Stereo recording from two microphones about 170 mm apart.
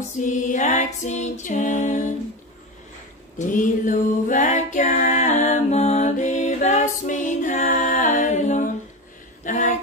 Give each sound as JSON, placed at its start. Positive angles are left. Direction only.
{"t": 0.2, "sound": "music", "side_deg": 50}
{"t": 3.3, "sound": "music", "side_deg": 50}
{"t": 9.4, "sound": "a sound", "side_deg": 50}